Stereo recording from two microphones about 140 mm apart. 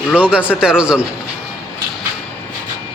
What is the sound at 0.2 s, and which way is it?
Speech, 10° right (ahead or behind).